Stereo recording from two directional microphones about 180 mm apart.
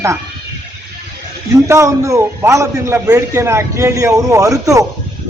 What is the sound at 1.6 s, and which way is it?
A man's voice, 15° right (ahead or behind).